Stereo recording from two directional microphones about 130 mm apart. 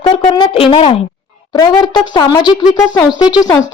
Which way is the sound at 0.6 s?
45° left (ahead or behind).